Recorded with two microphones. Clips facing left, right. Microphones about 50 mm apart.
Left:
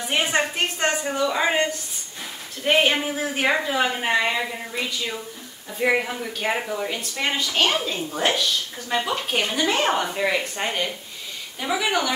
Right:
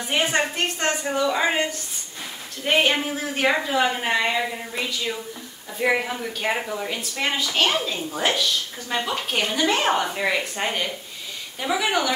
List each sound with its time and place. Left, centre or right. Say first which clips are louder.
0.0 s speech: even; centre